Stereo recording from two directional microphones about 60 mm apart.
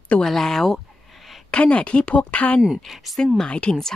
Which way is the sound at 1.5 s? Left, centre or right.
Centre.